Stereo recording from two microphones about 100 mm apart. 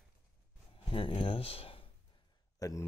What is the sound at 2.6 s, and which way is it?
Speech, 35° left (ahead or behind).